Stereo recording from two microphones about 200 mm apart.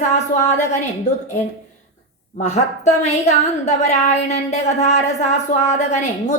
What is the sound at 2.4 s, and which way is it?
A woman's voice, 35° left (ahead or behind).